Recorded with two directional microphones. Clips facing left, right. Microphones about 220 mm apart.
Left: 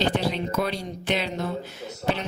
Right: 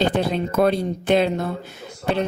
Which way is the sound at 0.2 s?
50° right (ahead or behind).